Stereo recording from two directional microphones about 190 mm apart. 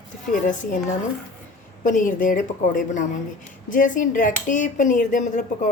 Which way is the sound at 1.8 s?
45° left (ahead or behind).